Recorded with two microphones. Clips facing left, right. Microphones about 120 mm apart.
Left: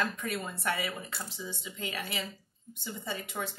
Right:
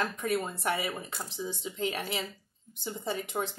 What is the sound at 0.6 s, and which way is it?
Speech, 20° right (ahead or behind).